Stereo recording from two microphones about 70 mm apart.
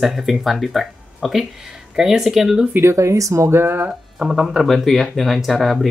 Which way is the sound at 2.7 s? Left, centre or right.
Right.